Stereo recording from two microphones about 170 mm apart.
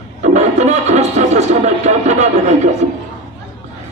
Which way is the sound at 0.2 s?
45° right (ahead or behind).